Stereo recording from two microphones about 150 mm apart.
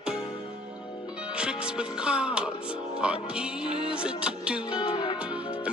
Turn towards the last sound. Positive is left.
turn(degrees=-10)  # may be behind; listen again after turning